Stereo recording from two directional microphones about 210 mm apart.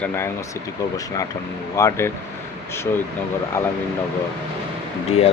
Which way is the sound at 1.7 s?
15° left (ahead or behind).